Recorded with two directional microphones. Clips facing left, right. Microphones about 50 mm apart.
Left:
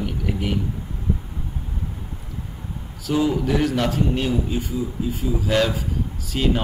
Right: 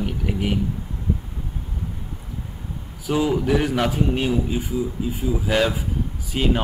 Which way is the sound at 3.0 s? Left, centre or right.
Centre.